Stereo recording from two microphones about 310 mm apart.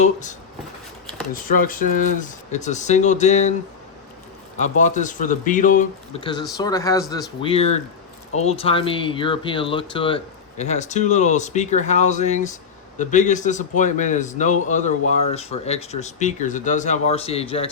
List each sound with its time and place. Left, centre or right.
0.0 s a man's voice: left
4.6 s a man's voice: left